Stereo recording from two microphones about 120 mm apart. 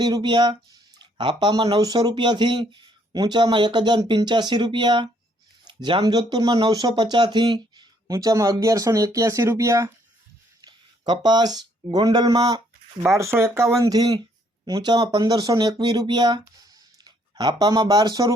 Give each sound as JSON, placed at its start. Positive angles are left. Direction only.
{"t": 0.0, "sound": "speech", "side_deg": -35}
{"t": 10.6, "sound": "speech", "side_deg": -35}